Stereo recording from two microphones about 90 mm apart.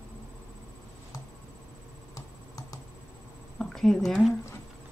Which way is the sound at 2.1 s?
40° left (ahead or behind).